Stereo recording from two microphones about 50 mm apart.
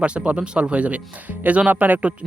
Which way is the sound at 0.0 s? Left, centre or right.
Right.